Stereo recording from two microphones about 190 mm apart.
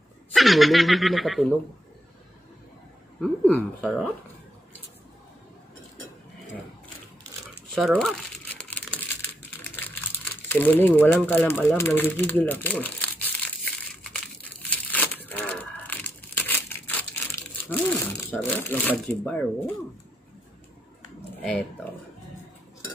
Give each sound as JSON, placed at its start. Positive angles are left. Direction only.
{"t": 0.3, "sound": "speech", "side_deg": 0}
{"t": 3.2, "sound": "speech", "side_deg": 5}
{"t": 7.7, "sound": "crumpling", "side_deg": 0}
{"t": 10.5, "sound": "speech", "side_deg": 10}
{"t": 14.6, "sound": "crushing", "side_deg": 10}
{"t": 18.3, "sound": "speech", "side_deg": 10}
{"t": 21.4, "sound": "speech", "side_deg": 5}